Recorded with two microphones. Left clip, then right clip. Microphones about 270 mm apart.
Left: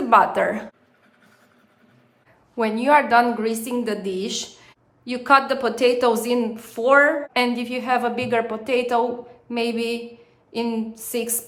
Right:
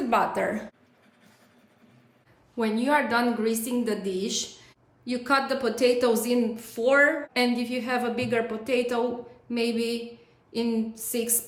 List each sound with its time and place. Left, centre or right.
0.1 s a woman's voice: centre
2.6 s a woman's voice: centre